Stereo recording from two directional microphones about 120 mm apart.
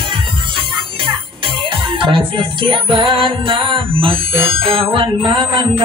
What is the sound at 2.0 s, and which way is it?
Music, 45° right (ahead or behind).